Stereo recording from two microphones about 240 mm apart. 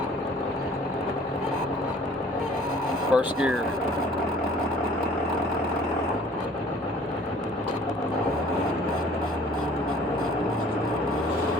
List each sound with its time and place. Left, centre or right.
3.1 s speech: centre